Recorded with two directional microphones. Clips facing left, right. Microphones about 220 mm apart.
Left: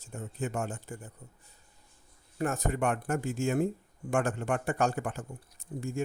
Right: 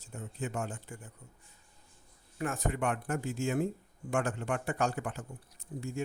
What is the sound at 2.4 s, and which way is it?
Speech, 40° left (ahead or behind).